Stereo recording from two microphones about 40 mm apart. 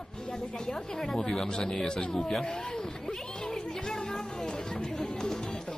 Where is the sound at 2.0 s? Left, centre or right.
Left.